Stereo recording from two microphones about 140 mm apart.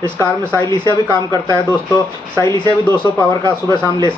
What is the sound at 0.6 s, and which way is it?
Speech, 30° left (ahead or behind).